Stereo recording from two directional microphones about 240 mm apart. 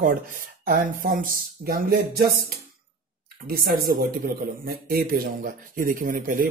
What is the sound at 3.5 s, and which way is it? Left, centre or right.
Speech, right.